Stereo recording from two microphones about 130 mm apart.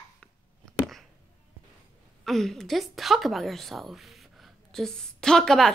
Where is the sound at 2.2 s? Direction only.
Centre (ahead or behind).